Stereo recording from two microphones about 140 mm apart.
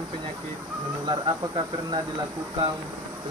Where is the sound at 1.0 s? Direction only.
35° right (ahead or behind).